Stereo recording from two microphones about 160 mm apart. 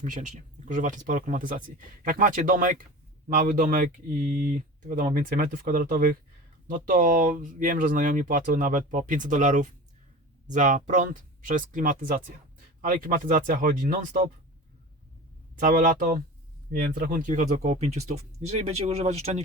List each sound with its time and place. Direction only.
0.0 s speech: 50° right (ahead or behind)
15.6 s speech: 60° right (ahead or behind)
16.7 s speech: 70° right (ahead or behind); by 19.4 s 40° right (ahead or behind)